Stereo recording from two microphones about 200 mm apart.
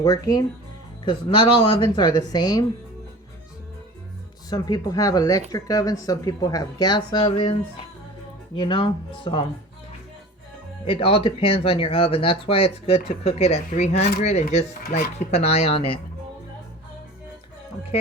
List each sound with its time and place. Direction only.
0.0 s speech: 20° left (ahead or behind)
4.4 s speech: 20° left (ahead or behind)
10.8 s speech: 25° left (ahead or behind)
14.8 s speech: 50° left (ahead or behind)
15.2 s speech: 30° left (ahead or behind)